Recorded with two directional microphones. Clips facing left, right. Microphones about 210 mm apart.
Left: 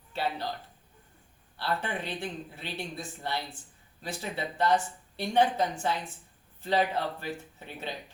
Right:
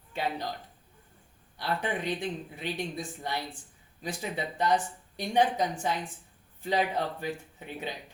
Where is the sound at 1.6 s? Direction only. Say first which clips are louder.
Right 1 dB; 15° right (ahead or behind).